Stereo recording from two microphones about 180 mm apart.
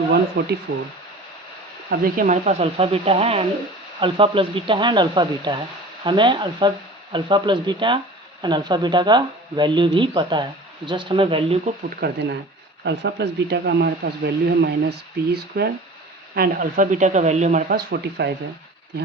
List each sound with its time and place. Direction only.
0.4 s speech: 75° right (ahead or behind)
1.9 s speech: 55° right (ahead or behind); by 11.7 s 30° right (ahead or behind)
11.9 s speech: 60° right (ahead or behind)
16.3 s speech: 55° right (ahead or behind)